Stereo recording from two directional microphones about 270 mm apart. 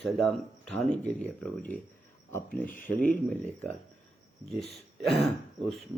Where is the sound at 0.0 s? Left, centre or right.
Centre.